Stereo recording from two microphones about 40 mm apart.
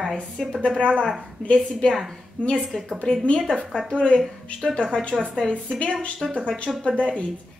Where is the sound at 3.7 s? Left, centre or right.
Centre.